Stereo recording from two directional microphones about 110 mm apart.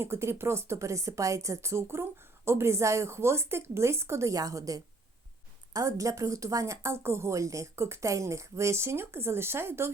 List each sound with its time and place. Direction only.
0.0 s speech: 25° right (ahead or behind)